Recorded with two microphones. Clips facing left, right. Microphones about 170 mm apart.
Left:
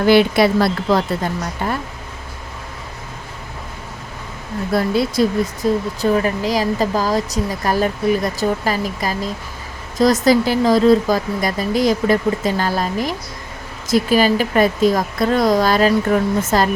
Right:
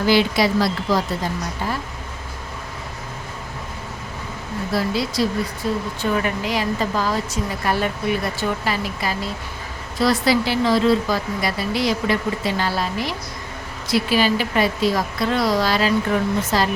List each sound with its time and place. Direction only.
0.0 s a woman's voice: 55° left (ahead or behind)
4.7 s speech: 50° left (ahead or behind)
5.6 s speech: 40° left (ahead or behind)